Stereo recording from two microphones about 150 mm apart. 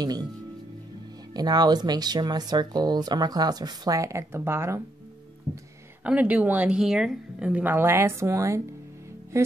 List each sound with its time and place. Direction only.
0.0 s speech: 25° right (ahead or behind)
1.3 s speech: 25° right (ahead or behind)
6.0 s a woman's voice: 10° right (ahead or behind)